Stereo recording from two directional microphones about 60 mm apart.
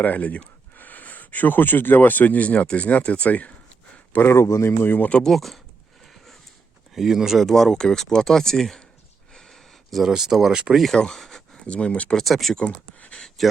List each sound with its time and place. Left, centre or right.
0.0 s speech: left
4.3 s speech: left
4.8 s speech: left
5.2 s speech: centre
6.9 s speech: centre
9.3 s a sound: centre
10.8 s speech: centre
11.6 s speech: centre
12.1 s speech: centre
12.5 s speech: left
13.1 s a sound: centre